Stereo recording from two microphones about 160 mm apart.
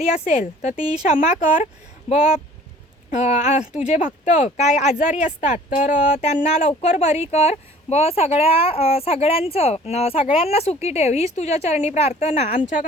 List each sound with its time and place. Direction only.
0.3 s speech: 50° left (ahead or behind)
3.1 s speech: 50° left (ahead or behind)